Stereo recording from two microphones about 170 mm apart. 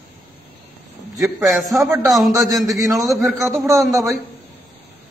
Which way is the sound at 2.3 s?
20° right (ahead or behind).